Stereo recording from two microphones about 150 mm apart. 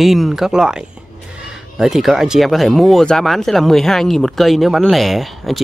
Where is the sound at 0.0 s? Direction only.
Centre (ahead or behind).